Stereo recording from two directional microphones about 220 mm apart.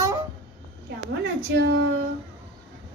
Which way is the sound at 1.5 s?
50° right (ahead or behind).